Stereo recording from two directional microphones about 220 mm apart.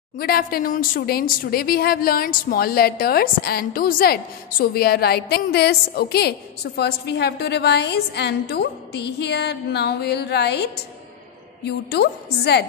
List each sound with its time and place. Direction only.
0.2 s speech: 40° left (ahead or behind)
11.9 s speech: 50° left (ahead or behind)